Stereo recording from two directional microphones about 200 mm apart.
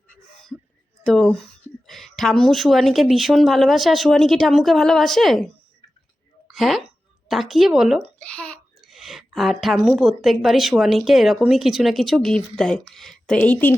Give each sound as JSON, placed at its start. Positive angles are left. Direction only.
{"t": 1.0, "sound": "a woman's voice", "side_deg": 5}
{"t": 6.5, "sound": "a woman's voice", "side_deg": 0}